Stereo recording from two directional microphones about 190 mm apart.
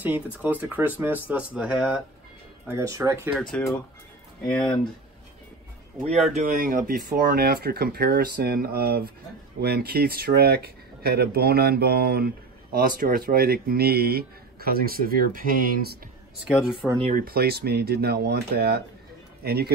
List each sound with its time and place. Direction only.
0.0 s speech: 10° right (ahead or behind)
2.7 s speech: 15° right (ahead or behind)
4.5 s speech: 5° left (ahead or behind)
6.3 s speech: 45° right (ahead or behind)
16.4 s speech: 5° right (ahead or behind)
17.1 s speech: 50° right (ahead or behind)